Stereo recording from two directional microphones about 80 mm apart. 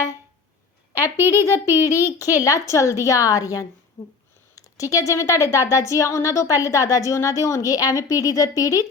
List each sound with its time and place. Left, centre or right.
1.1 s a child's voice: right
2.1 s speech: left